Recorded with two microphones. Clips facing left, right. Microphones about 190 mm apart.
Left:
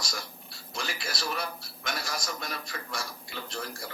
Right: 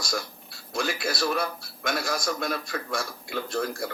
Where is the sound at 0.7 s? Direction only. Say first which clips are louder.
Right 8 dB; 55° right (ahead or behind).